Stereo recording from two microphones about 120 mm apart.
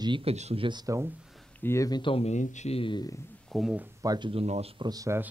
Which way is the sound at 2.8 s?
40° left (ahead or behind).